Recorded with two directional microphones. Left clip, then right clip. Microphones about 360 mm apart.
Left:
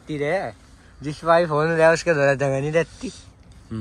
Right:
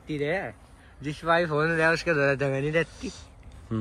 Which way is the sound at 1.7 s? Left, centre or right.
Left.